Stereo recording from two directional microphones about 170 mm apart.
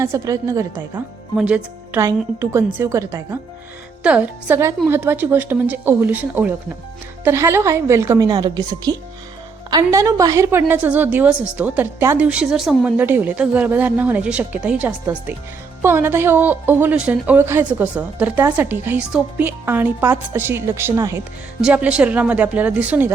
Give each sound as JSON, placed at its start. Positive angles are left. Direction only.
{"t": 0.0, "sound": "a woman's voice", "side_deg": -15}
{"t": 1.4, "sound": "a woman's voice", "side_deg": -10}
{"t": 21.6, "sound": "a woman's voice", "side_deg": -5}